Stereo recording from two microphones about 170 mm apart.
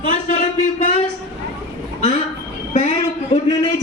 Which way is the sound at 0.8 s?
35° left (ahead or behind).